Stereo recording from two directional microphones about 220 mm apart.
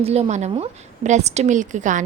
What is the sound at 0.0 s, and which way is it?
A woman's voice, 30° right (ahead or behind).